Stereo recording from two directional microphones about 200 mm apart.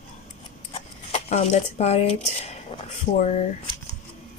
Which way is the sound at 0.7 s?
30° left (ahead or behind).